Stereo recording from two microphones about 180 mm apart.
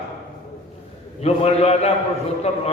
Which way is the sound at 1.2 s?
35° left (ahead or behind).